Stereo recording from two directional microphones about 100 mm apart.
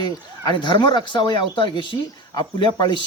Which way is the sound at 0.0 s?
50° left (ahead or behind).